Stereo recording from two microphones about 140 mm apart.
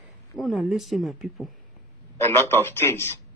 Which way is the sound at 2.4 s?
15° left (ahead or behind).